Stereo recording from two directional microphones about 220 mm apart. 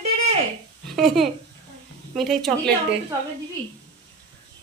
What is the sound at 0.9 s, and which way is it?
Speech, centre (ahead or behind).